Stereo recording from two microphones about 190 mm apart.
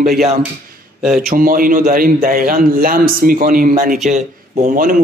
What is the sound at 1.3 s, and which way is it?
Speech, 50° right (ahead or behind).